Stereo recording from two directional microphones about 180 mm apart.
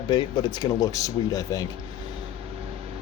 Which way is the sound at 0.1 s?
25° left (ahead or behind).